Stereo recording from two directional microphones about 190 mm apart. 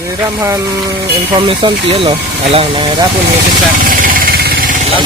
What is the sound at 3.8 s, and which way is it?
Vehicle, 45° right (ahead or behind).